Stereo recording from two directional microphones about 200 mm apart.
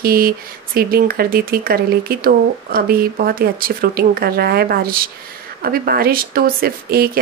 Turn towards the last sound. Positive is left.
turn(degrees=-50)  # may be behind; listen again after turning